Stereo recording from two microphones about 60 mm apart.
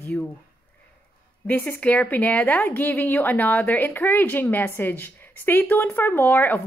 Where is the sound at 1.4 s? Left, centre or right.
Left.